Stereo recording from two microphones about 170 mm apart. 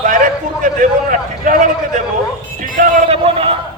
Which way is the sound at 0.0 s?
50° right (ahead or behind).